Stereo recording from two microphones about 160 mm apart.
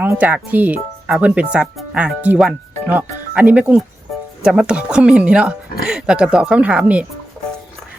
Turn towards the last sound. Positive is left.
turn(degrees=-5)  # may be behind; listen again after turning